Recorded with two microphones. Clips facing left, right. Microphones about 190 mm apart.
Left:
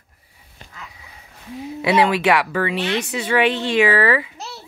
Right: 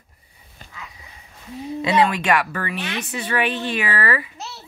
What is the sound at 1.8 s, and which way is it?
Speech, 10° left (ahead or behind).